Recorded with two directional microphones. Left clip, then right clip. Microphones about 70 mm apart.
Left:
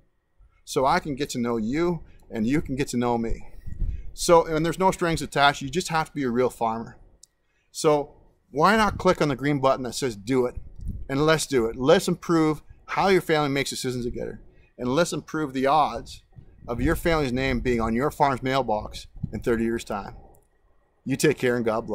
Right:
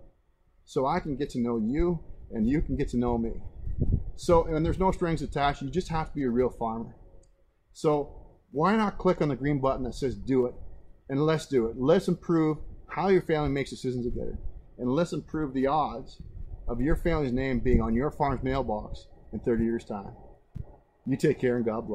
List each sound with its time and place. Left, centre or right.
0.7 s speech: left